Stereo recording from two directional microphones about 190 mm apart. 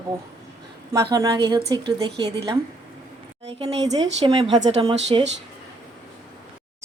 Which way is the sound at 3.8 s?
20° right (ahead or behind).